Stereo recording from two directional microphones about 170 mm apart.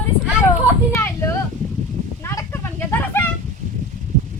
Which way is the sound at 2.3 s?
15° left (ahead or behind).